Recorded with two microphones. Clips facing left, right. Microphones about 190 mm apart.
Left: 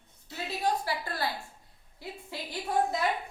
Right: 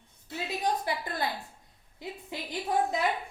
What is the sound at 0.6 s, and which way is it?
A woman's voice, 20° right (ahead or behind).